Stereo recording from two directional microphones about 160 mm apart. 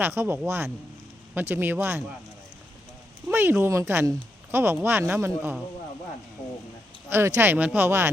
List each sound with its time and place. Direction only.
0.0 s speech: 15° right (ahead or behind)
3.2 s a sound: 15° right (ahead or behind)
3.6 s speech: 15° right (ahead or behind)
7.1 s speech: 15° right (ahead or behind)